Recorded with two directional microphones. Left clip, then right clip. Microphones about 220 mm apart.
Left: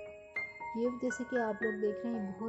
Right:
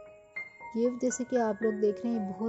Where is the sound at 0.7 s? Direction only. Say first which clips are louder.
Right 6 dB; 15° right (ahead or behind).